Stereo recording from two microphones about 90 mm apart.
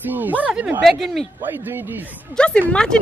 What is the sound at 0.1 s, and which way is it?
Speech, 20° right (ahead or behind).